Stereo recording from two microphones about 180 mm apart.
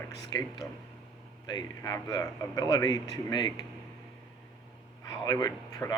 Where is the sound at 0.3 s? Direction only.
25° left (ahead or behind).